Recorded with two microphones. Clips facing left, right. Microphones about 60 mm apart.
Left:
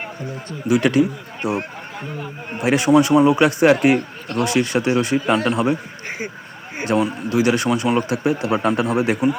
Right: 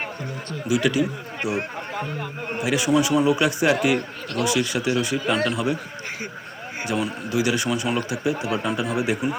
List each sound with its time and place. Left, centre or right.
0.7 s a man's voice: left
6.9 s a man's voice: left
8.1 s speech: left